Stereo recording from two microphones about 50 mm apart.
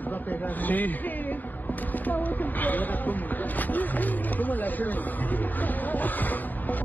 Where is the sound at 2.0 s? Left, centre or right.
Left.